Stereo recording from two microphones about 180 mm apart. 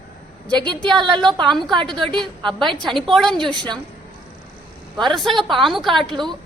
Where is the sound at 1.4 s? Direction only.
Centre (ahead or behind).